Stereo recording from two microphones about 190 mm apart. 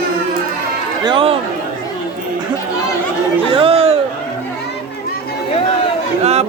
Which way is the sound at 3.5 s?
30° right (ahead or behind).